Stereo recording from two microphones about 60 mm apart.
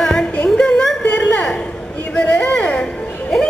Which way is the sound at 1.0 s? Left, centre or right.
Left.